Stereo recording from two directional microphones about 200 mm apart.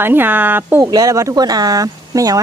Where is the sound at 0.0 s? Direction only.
10° right (ahead or behind).